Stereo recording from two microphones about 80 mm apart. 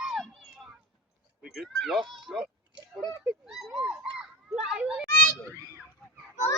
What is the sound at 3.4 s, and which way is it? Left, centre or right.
Speech, centre.